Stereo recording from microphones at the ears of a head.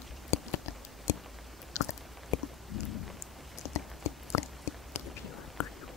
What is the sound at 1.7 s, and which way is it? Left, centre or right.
Chewing, left.